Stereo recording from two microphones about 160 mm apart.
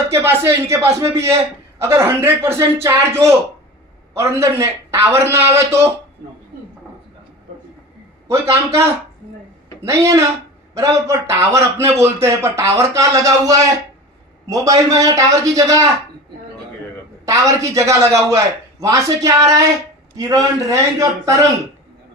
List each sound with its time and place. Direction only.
0.1 s a man's voice: 15° right (ahead or behind)
8.3 s a man's voice: 20° right (ahead or behind)
9.8 s a man's voice: 20° right (ahead or behind)
17.2 s a man's voice: 20° right (ahead or behind)